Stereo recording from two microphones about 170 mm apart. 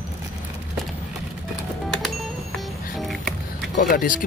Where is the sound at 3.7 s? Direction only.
50° left (ahead or behind).